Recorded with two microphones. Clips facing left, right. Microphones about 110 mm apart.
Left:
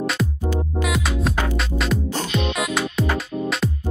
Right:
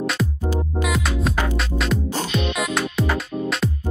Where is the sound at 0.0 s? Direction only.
Centre (ahead or behind).